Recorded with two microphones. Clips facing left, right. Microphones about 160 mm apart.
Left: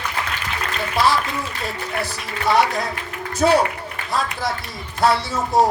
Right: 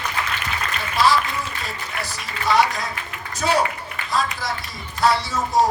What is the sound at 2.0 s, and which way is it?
Speech, 60° left (ahead or behind).